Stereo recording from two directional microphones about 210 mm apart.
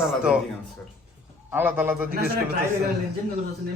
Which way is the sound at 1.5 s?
10° right (ahead or behind).